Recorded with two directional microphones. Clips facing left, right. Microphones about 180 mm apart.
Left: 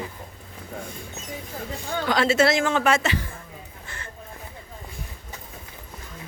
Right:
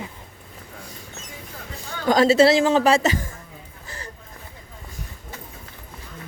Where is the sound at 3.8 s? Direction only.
35° right (ahead or behind).